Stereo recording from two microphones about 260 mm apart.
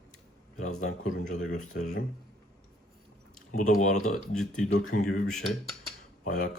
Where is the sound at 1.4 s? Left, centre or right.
Left.